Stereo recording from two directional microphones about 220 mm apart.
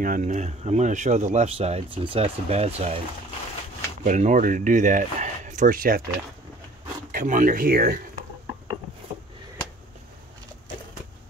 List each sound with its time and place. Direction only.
0.0 s speech: 35° right (ahead or behind)
4.0 s speech: 35° right (ahead or behind)
7.1 s speech: 35° right (ahead or behind)